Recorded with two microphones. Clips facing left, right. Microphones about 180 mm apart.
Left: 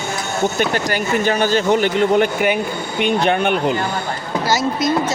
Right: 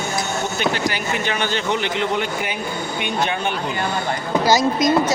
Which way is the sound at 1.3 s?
40° left (ahead or behind).